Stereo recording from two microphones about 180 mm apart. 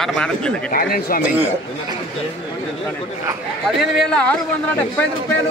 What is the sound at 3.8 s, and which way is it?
Speech, 5° left (ahead or behind).